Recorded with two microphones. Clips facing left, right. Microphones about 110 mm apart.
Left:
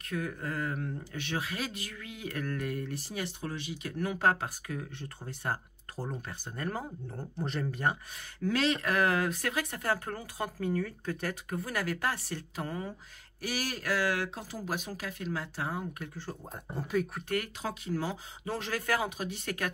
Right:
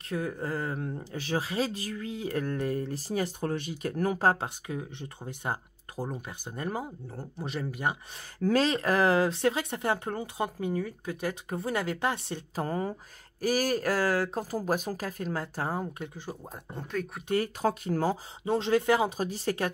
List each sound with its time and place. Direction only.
0.1 s speech: 30° right (ahead or behind)
4.6 s speech: 20° right (ahead or behind)
7.1 s speech: 5° right (ahead or behind)
8.5 s speech: 40° right (ahead or behind); by 11.3 s 15° right (ahead or behind)
11.4 s speech: 25° right (ahead or behind)
12.5 s speech: 40° right (ahead or behind)
16.0 s speech: 15° right (ahead or behind)
16.7 s speech: 5° left (ahead or behind)
17.6 s speech: 45° right (ahead or behind)
18.4 s speech: 25° right (ahead or behind)
19.0 s speech: 35° right (ahead or behind)